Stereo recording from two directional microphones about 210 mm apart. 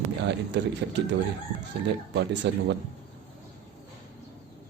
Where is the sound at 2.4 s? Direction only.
55° right (ahead or behind).